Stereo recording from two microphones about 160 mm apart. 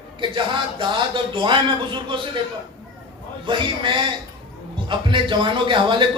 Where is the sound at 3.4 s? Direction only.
30° right (ahead or behind).